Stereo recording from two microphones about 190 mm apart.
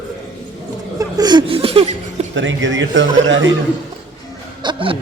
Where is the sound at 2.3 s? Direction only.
80° right.